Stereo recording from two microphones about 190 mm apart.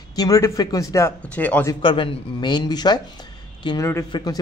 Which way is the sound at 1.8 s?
25° left (ahead or behind).